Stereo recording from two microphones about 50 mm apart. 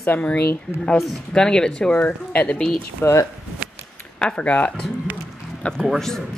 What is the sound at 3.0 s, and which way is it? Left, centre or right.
Speech, left.